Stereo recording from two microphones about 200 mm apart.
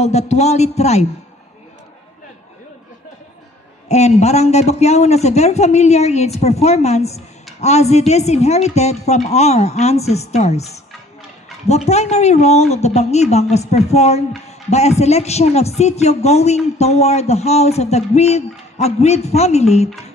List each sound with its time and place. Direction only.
0.0 s speech: 35° left (ahead or behind)
3.9 s speech: 35° left (ahead or behind)